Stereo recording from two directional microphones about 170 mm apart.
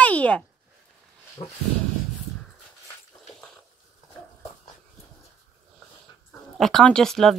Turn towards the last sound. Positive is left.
turn(degrees=5)  # may be behind; listen again after turning